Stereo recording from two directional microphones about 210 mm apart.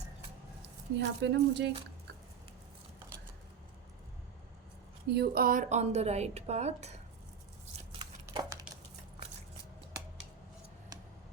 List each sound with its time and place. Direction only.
0.9 s speech: 55° right (ahead or behind)
5.0 s a woman's voice: 50° right (ahead or behind); by 6.9 s 30° right (ahead or behind)
8.3 s a sound: 15° right (ahead or behind)